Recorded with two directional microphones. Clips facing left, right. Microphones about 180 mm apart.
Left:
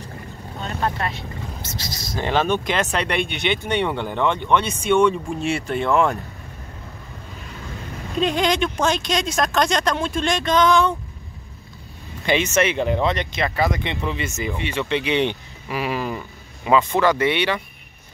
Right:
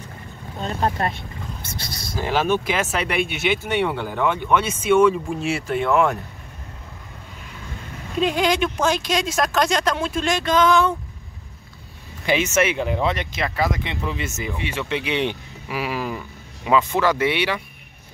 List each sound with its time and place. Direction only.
0.6 s speech: 30° right (ahead or behind)
1.0 s speech: 55° right (ahead or behind)
2.1 s speech: 5° right (ahead or behind)
8.2 s speech: 5° right (ahead or behind)
12.3 s speech: 5° right (ahead or behind)